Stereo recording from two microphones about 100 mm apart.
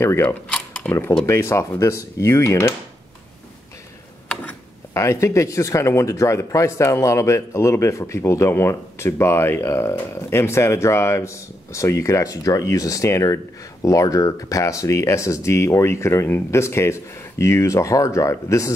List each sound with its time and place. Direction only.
0.0 s speech: 25° left (ahead or behind)
4.9 s speech: 30° left (ahead or behind)